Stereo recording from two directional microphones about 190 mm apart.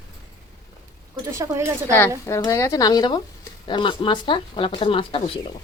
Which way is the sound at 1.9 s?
15° left (ahead or behind).